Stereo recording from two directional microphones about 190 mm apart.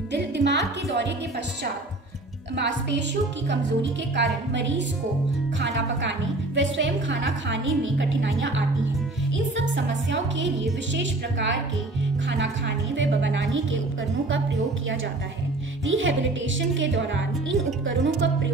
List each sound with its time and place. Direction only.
0.1 s speech: 65° right (ahead or behind)
2.5 s a woman's voice: 65° right (ahead or behind); by 13.7 s 90° right
15.8 s a woman's voice: 90° right; by 18.5 s 75° right (ahead or behind)